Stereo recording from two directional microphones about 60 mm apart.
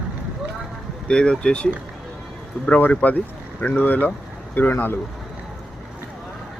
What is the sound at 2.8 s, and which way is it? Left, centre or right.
Speech, left.